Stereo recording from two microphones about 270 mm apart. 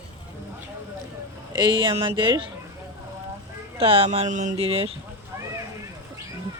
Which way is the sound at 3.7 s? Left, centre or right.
Right.